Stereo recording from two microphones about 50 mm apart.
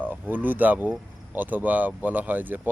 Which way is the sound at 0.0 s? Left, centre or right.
Right.